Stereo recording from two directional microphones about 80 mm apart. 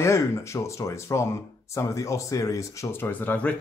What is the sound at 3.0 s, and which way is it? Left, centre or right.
Speech, left.